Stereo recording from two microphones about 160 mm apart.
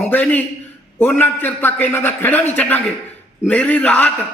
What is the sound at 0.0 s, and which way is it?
Speech, 10° left (ahead or behind).